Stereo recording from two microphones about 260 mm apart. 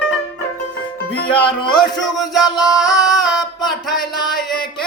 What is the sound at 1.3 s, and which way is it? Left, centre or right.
Music, centre.